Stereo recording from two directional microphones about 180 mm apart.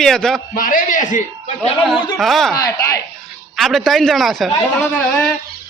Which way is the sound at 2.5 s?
20° left (ahead or behind).